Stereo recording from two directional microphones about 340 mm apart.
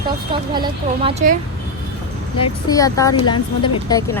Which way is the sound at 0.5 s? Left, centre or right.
Centre.